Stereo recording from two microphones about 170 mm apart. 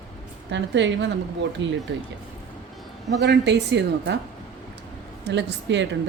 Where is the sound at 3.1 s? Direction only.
85° right.